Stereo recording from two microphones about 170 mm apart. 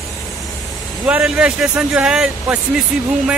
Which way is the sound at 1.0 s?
5° right (ahead or behind).